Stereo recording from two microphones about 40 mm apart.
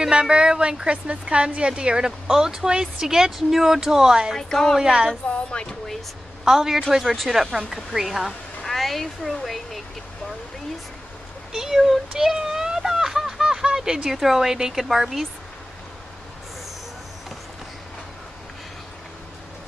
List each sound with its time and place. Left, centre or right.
0.0 s a woman's voice: right
4.4 s a woman's voice: centre
4.8 s a woman's voice: right
5.3 s speech: left
6.4 s a woman's voice: centre
8.7 s speech: centre
11.5 s a sound: centre
14.1 s a woman's voice: centre